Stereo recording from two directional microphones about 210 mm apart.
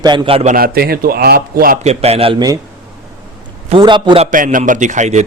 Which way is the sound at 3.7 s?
20° right (ahead or behind).